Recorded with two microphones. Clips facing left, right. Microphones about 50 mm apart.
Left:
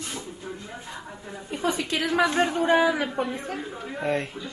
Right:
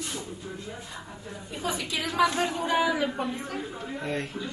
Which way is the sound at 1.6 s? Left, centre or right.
Left.